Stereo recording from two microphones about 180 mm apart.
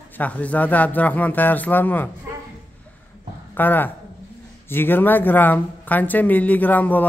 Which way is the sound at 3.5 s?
10° left (ahead or behind).